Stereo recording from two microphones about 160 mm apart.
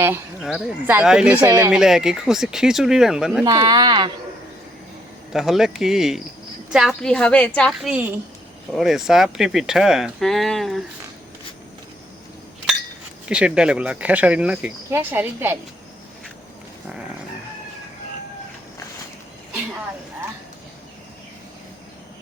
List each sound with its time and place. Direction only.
0.4 s speech: 5° right (ahead or behind)
3.4 s speech: 25° right (ahead or behind)
5.3 s a woman's voice: centre (ahead or behind)
7.9 s speech: 10° right (ahead or behind)
13.2 s speech: 5° right (ahead or behind)